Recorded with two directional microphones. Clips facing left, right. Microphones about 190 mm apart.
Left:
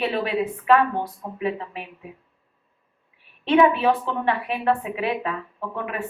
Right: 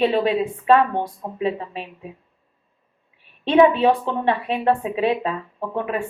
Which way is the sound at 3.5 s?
25° right (ahead or behind).